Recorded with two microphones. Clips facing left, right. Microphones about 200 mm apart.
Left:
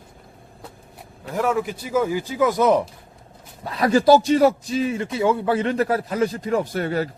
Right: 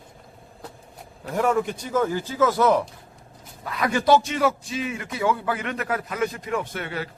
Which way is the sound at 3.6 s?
35° left (ahead or behind).